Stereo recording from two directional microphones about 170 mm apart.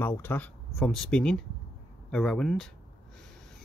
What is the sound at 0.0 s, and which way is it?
Speech, 15° left (ahead or behind).